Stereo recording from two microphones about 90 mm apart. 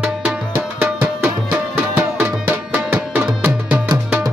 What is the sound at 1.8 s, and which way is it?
Music, 20° right (ahead or behind).